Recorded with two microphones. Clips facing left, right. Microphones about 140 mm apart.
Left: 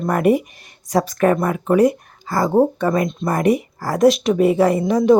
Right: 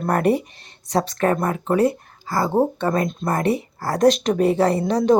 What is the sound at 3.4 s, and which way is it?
Speech, 10° left (ahead or behind).